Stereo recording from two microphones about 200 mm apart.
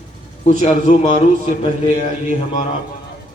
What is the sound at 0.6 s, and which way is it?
Speech, 35° left (ahead or behind).